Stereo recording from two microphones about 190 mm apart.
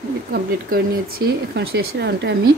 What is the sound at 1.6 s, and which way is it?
Speech, 65° right (ahead or behind).